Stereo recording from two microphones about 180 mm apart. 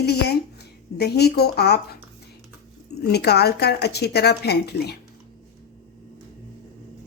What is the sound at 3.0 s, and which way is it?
A woman's voice, 65° left (ahead or behind).